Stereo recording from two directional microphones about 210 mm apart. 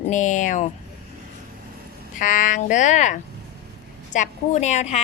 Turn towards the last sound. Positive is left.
turn(degrees=35)  # may be behind; listen again after turning